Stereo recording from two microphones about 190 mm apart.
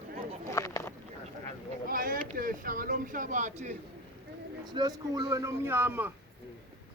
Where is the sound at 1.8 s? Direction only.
50° right (ahead or behind).